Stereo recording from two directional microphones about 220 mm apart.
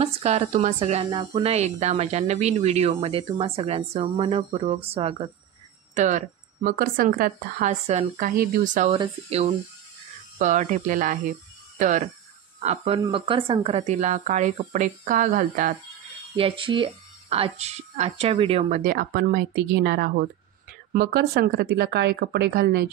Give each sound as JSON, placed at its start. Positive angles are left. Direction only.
{"t": 0.0, "sound": "speech", "side_deg": -30}
{"t": 8.9, "sound": "speech", "side_deg": -25}
{"t": 16.3, "sound": "speech", "side_deg": -25}
{"t": 18.8, "sound": "speech", "side_deg": -40}